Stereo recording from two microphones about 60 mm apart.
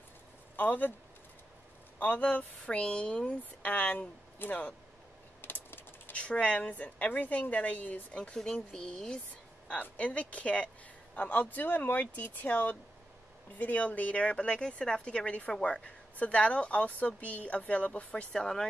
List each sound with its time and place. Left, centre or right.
0.6 s speech: left
2.0 s speech: left
5.4 s a sound: left
6.1 s speech: centre
9.8 s speech: left
18.3 s speech: centre